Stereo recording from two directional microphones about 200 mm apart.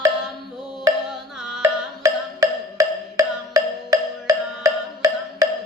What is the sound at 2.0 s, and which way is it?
Music, 15° right (ahead or behind).